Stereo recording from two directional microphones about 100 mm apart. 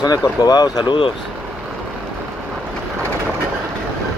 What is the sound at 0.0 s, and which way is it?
Speech, 40° left (ahead or behind).